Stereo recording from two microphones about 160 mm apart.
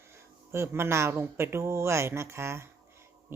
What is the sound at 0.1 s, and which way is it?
Speech, 15° right (ahead or behind).